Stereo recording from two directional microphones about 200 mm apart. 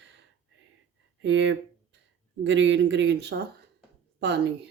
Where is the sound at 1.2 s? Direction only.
65° right (ahead or behind).